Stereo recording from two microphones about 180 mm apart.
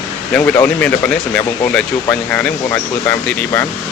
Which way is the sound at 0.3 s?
10° left (ahead or behind).